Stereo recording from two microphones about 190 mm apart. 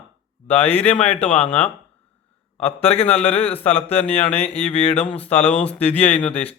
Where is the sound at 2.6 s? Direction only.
30° left (ahead or behind).